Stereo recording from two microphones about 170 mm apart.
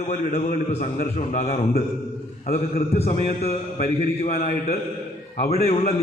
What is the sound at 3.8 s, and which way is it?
Speech, 60° left (ahead or behind).